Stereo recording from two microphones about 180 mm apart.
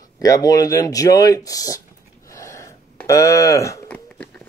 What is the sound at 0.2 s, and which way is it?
Speech, 20° left (ahead or behind).